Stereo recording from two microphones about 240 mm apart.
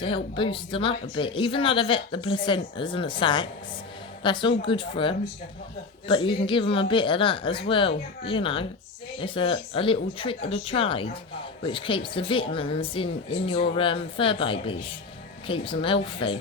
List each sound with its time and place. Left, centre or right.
0.0 s speech: left